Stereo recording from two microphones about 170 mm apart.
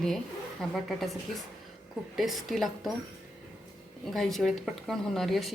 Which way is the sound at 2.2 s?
Centre (ahead or behind).